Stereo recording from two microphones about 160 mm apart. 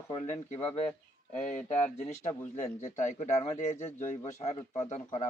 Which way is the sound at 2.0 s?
45° left (ahead or behind).